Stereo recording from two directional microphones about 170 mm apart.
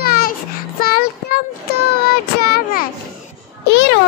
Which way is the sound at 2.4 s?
65° left (ahead or behind).